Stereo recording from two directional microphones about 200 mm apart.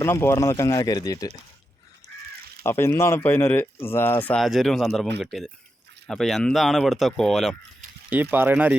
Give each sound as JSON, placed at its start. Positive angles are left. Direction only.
{"t": 0.0, "sound": "speech", "side_deg": 10}
{"t": 2.6, "sound": "speech", "side_deg": 10}
{"t": 8.1, "sound": "speech", "side_deg": -10}